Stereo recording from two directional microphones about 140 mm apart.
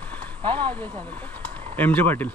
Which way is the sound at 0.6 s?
10° left (ahead or behind).